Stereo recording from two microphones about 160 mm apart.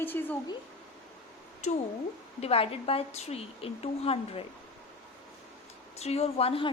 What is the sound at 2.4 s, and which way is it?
A woman's voice, 35° left (ahead or behind).